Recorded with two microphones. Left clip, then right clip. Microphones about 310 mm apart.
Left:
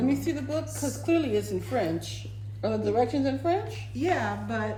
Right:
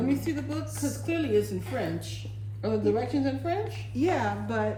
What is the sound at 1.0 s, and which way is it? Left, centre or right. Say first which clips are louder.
Speech: left 1 dB; centre.